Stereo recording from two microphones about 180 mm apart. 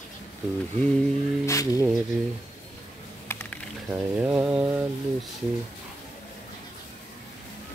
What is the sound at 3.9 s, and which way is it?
Mantra, 5° right (ahead or behind).